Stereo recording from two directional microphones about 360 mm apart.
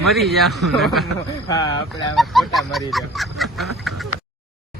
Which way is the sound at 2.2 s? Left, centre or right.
Centre.